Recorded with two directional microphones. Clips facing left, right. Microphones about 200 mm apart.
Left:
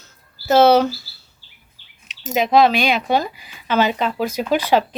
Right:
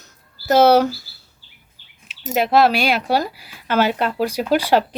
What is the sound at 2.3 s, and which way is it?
Speech, 5° right (ahead or behind).